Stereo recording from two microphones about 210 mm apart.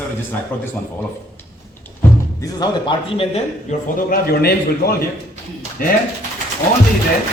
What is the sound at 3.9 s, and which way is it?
A man's voice, 45° left (ahead or behind).